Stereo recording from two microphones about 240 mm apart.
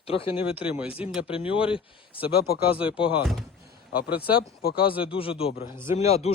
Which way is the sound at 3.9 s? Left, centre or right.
Left.